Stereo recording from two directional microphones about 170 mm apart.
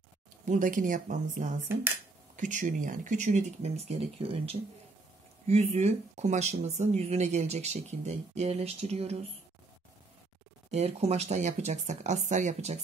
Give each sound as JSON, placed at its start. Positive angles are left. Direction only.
{"t": 0.5, "sound": "speech", "side_deg": -50}
{"t": 10.7, "sound": "speech", "side_deg": -40}